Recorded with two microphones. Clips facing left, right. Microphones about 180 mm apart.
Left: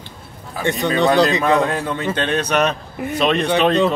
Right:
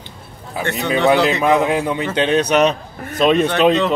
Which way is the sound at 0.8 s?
15° right (ahead or behind).